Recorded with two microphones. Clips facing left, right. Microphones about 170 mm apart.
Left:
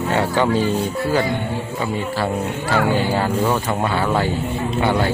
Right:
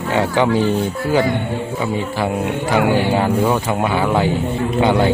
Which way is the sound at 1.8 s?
15° right (ahead or behind).